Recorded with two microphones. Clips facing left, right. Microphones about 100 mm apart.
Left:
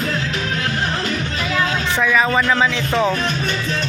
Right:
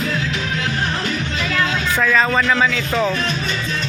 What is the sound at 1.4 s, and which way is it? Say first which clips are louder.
Music: even; 20° left (ahead or behind).